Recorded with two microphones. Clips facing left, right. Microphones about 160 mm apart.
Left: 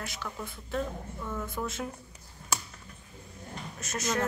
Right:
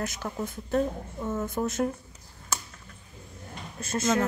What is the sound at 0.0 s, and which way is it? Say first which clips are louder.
A woman's voice: right 6 dB; 45° right (ahead or behind).